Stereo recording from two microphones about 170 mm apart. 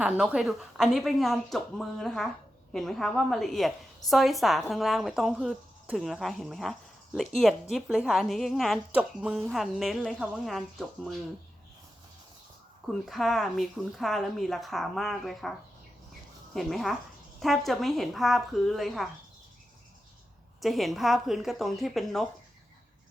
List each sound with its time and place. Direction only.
0.0 s speech: 5° right (ahead or behind)
12.9 s speech: centre (ahead or behind)
16.6 s speech: centre (ahead or behind)
20.6 s speech: centre (ahead or behind)